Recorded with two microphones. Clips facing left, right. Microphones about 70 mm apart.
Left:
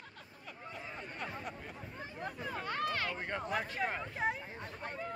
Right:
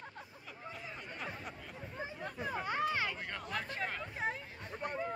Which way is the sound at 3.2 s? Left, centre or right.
Left.